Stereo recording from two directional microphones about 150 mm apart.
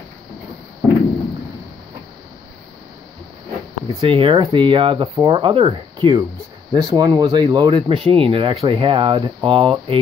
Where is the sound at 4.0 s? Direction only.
35° right (ahead or behind).